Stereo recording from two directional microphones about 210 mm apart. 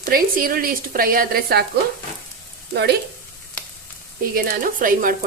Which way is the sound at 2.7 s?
50° right (ahead or behind).